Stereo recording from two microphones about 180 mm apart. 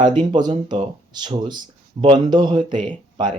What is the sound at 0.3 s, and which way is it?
Speech, 25° right (ahead or behind).